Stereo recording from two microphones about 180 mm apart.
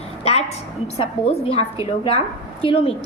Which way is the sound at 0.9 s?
35° left (ahead or behind).